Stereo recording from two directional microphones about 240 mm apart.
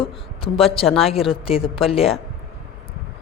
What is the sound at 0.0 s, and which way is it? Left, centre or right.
A woman's voice, left.